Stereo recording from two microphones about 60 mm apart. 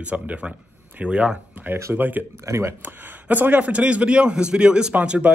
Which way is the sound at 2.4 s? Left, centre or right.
Right.